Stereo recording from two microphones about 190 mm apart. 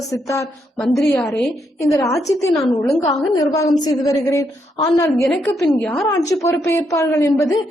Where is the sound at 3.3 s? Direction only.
20° left (ahead or behind); by 6.0 s 5° left (ahead or behind).